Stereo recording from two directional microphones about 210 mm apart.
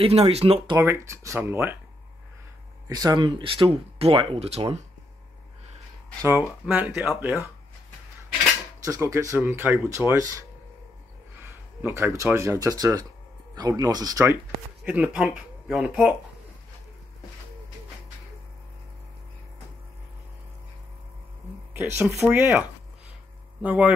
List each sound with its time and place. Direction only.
0.0 s speech: 30° right (ahead or behind)
0.7 s speech: 15° right (ahead or behind)
2.9 s speech: 20° right (ahead or behind)
6.6 s speech: 5° right (ahead or behind)
8.8 s speech: 15° right (ahead or behind)
11.4 s a sound: 10° right (ahead or behind)
12.2 s speech: 15° right (ahead or behind)
21.7 s speech: 10° right (ahead or behind)